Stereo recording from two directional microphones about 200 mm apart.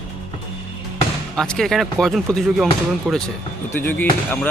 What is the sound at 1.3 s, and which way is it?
Speech, 5° left (ahead or behind).